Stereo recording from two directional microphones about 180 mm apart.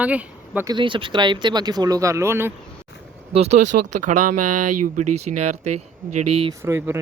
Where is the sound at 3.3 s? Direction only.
35° right (ahead or behind).